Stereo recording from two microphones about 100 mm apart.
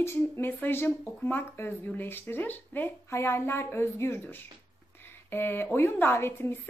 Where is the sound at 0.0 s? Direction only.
25° left (ahead or behind).